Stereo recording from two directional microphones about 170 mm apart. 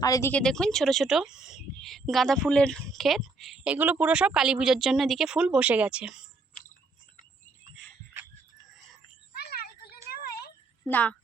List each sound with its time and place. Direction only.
0.0 s speech: 20° left (ahead or behind); by 6.1 s 5° right (ahead or behind)
9.4 s a sound: 65° left (ahead or behind)
10.8 s a woman's voice: 10° left (ahead or behind)